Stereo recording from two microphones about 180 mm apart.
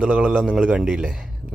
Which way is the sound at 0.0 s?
5° right (ahead or behind).